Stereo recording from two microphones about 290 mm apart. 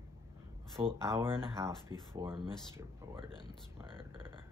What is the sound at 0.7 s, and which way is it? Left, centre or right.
Speech, centre.